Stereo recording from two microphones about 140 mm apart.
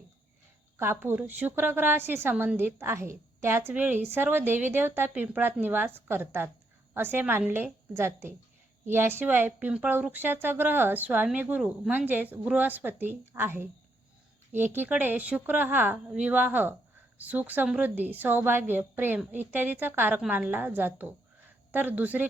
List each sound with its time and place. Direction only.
0.8 s a woman's voice: 15° right (ahead or behind)